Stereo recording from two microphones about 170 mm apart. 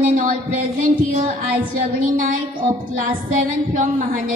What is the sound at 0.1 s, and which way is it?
Speech, 55° right (ahead or behind).